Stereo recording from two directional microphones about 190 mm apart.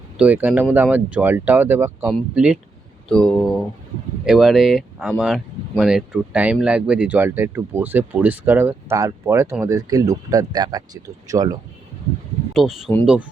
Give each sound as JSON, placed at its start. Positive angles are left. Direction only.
{"t": 0.2, "sound": "speech", "side_deg": -10}
{"t": 12.5, "sound": "speech", "side_deg": 0}